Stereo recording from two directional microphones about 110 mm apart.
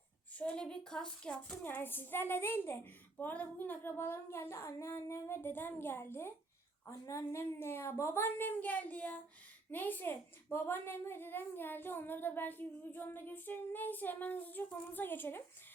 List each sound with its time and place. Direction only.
0.3 s a child's voice: 10° left (ahead or behind)
1.6 s a woman's voice: 20° left (ahead or behind)